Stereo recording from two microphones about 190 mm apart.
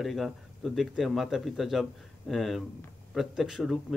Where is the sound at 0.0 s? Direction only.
Centre (ahead or behind).